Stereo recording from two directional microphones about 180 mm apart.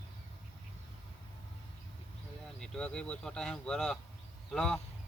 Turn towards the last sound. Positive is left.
turn(degrees=5)  # may be behind; listen again after turning